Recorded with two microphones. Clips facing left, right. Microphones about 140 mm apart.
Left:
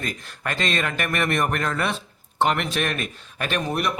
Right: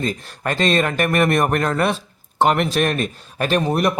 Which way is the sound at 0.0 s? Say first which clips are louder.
Right 7 dB; 35° right (ahead or behind).